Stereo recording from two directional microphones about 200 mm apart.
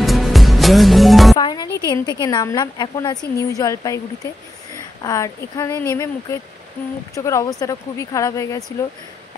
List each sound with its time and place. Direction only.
0.0 s music: centre (ahead or behind)
1.3 s a woman's voice: 20° left (ahead or behind)
5.0 s a woman's voice: 15° left (ahead or behind)